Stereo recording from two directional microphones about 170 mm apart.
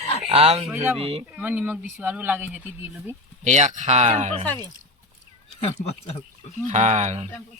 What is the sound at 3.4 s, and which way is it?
Speech, 45° right (ahead or behind).